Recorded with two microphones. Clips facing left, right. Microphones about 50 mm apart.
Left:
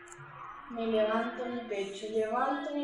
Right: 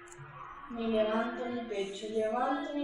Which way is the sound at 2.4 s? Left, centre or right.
Left.